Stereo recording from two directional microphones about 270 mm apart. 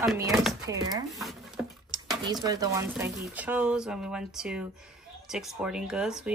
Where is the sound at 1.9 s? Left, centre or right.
Centre.